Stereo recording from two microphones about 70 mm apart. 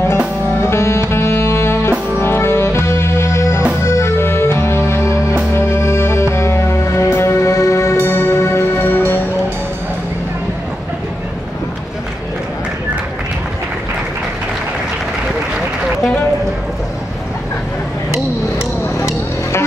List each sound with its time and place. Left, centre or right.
0.6 s music: left
8.8 s music: left